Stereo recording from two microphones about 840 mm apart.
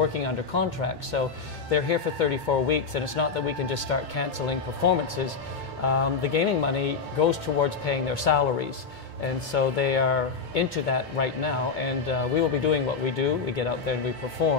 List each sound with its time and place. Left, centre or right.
0.1 s speech: left